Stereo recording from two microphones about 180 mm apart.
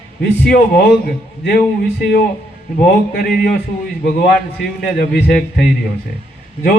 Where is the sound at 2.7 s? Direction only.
55° left (ahead or behind).